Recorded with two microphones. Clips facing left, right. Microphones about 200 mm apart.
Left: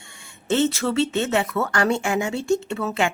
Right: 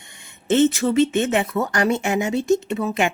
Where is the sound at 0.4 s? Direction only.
20° right (ahead or behind).